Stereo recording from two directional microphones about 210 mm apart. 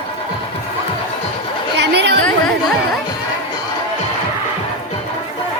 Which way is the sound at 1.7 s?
55° right (ahead or behind).